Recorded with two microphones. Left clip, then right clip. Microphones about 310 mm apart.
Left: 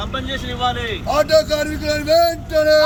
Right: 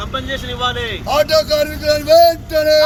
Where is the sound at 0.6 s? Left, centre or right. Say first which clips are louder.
Even; centre.